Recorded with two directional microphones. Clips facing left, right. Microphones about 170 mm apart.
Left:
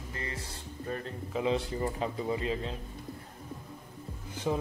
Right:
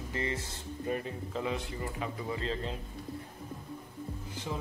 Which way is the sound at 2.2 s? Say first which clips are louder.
Left 3 dB; 20° left (ahead or behind).